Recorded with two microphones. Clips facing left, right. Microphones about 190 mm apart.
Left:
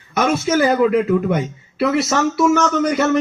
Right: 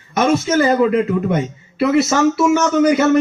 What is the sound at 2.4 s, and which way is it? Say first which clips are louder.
Speech: right 2 dB; 5° right (ahead or behind).